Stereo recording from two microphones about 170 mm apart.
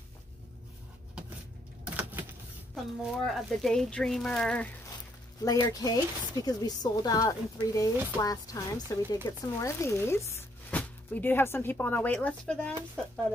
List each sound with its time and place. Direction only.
2.0 s power windows: 10° right (ahead or behind)
2.7 s speech: centre (ahead or behind)
5.4 s speech: 20° left (ahead or behind)